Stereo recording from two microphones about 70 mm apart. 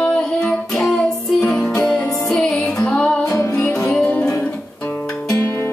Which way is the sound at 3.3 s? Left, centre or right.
Left.